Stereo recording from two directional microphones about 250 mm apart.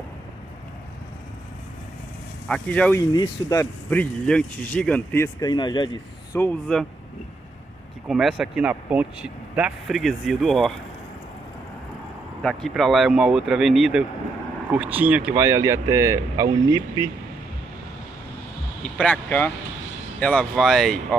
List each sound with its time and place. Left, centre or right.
2.4 s speech: centre
6.3 s speech: centre
8.1 s speech: centre
12.4 s speech: centre
18.9 s speech: centre